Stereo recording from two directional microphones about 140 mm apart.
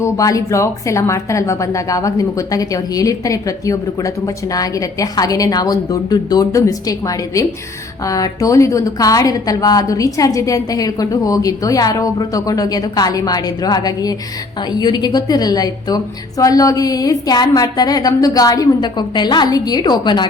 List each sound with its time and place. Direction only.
0.0 s a woman's voice: 25° left (ahead or behind)